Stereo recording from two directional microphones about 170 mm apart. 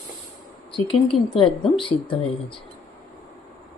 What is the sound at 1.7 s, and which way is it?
Speech, 30° left (ahead or behind).